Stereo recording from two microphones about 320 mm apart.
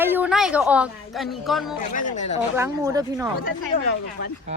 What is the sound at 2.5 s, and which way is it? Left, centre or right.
Speech, centre.